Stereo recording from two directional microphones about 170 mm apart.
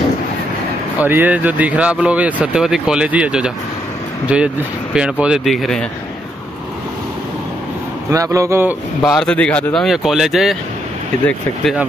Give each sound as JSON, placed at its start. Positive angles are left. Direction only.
{"t": 0.9, "sound": "speech", "side_deg": -10}
{"t": 8.1, "sound": "speech", "side_deg": -20}
{"t": 9.0, "sound": "speech", "side_deg": 5}